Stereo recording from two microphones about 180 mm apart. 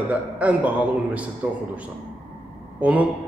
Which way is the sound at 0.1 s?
10° right (ahead or behind).